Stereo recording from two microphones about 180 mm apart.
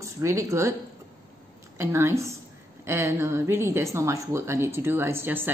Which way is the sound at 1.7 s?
15° right (ahead or behind).